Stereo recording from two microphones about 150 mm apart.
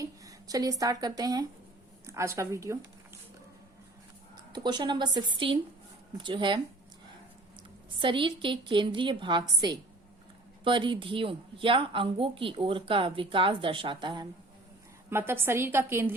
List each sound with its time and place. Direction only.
0.0 s speech: 25° right (ahead or behind)
4.4 s a woman's voice: 30° right (ahead or behind)
7.9 s a woman's voice: 35° right (ahead or behind)
15.1 s a woman's voice: 15° right (ahead or behind)